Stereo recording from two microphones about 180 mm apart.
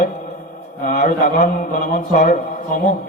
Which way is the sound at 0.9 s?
40° left (ahead or behind).